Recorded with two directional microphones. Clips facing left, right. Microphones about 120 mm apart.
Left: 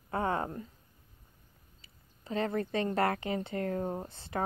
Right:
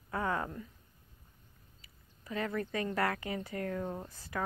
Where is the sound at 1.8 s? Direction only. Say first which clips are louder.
Left 3 dB; 30° left (ahead or behind).